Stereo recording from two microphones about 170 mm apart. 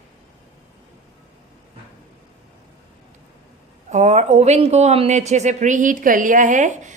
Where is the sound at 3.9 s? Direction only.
40° right (ahead or behind).